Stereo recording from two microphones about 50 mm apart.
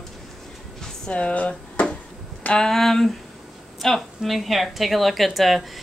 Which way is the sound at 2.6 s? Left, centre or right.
Centre.